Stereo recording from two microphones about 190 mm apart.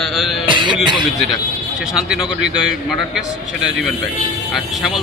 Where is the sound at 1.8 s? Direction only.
5° right (ahead or behind).